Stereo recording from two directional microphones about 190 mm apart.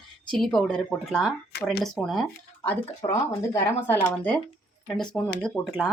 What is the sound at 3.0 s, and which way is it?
Speech, 15° left (ahead or behind).